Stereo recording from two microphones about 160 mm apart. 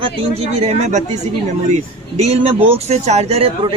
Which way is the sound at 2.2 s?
40° right (ahead or behind).